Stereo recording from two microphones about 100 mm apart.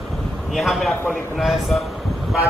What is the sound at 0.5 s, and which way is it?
Speech, centre (ahead or behind).